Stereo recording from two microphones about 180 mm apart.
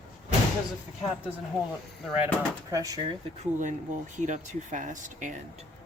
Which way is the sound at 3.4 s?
45° right (ahead or behind).